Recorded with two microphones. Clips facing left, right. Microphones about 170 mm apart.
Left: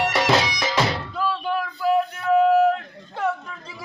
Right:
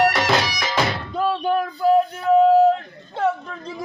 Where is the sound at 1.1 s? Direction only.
50° right (ahead or behind).